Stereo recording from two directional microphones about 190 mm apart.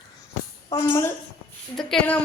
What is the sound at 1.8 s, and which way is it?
Speech, centre (ahead or behind).